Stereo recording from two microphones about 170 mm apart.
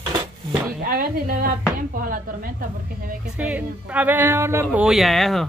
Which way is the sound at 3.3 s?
10° right (ahead or behind).